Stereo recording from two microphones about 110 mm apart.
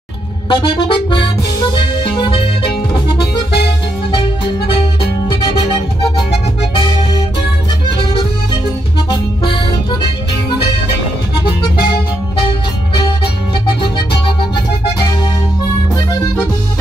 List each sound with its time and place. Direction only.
0.5 s music: 45° left (ahead or behind)
4.1 s music: 50° left (ahead or behind)
5.9 s music: 55° left (ahead or behind)
8.0 s accordion: 50° left (ahead or behind)
9.1 s music: 45° left (ahead or behind)